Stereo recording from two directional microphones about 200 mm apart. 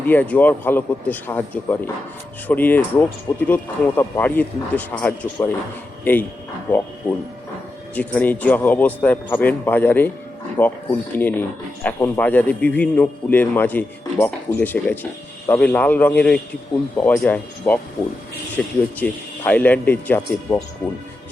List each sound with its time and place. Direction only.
0.1 s speech: 10° left (ahead or behind)
7.9 s speech: 10° left (ahead or behind)